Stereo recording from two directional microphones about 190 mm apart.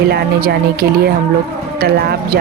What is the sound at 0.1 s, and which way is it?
Speech, 55° right (ahead or behind).